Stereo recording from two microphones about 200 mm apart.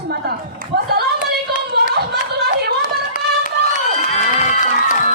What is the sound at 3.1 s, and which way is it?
Crowd, 40° left (ahead or behind).